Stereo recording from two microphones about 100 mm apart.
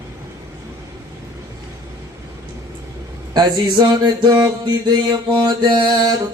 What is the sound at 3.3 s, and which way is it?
Mantra, 45° right (ahead or behind).